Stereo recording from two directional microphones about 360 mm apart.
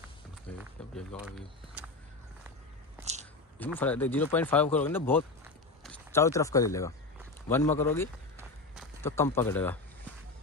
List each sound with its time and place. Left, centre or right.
0.5 s a sound: centre
0.9 s speech: centre
3.0 s biting: centre
3.6 s speech: centre
8.4 s run: centre